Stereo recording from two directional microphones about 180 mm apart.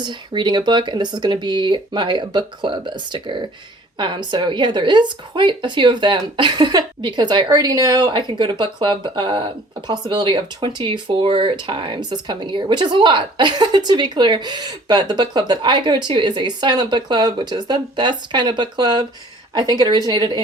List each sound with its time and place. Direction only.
0.0 s speech: 25° right (ahead or behind)